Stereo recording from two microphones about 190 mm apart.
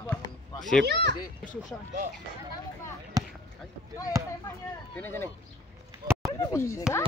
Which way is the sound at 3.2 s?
20° right (ahead or behind).